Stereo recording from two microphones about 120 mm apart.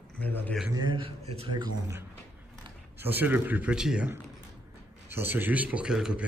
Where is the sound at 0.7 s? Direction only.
40° right (ahead or behind).